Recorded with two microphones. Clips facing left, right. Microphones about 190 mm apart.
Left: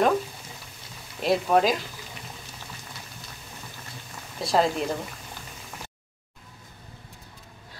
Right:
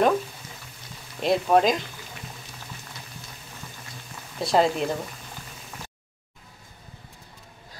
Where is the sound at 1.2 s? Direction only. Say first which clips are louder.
Right 1 dB; centre (ahead or behind).